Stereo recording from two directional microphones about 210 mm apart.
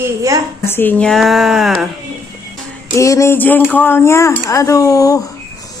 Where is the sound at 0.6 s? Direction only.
10° left (ahead or behind).